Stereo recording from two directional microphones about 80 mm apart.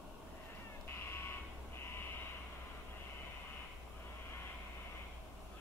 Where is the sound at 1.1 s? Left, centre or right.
Left.